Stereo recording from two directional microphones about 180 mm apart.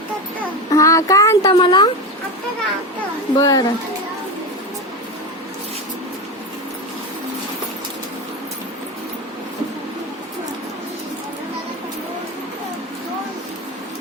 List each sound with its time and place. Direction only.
0.7 s speech: 15° left (ahead or behind)
3.3 s speech: 20° left (ahead or behind)